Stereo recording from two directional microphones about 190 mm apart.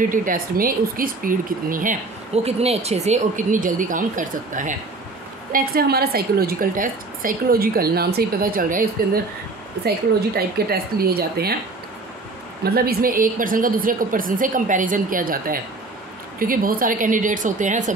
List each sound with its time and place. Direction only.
0.1 s speech: 45° right (ahead or behind)
5.5 s speech: 55° right (ahead or behind)
12.6 s speech: 50° right (ahead or behind)